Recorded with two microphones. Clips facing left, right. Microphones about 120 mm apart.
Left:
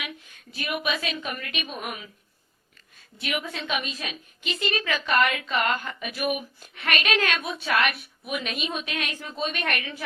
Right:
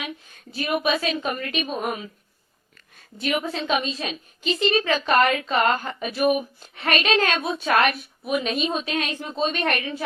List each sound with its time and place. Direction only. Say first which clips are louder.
0.0 s a woman's voice: right 4 dB; 35° right (ahead or behind)
3.2 s a woman's voice: right 6 dB; 35° right (ahead or behind)